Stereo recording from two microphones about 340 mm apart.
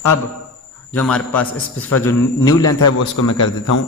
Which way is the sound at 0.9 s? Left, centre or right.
Centre.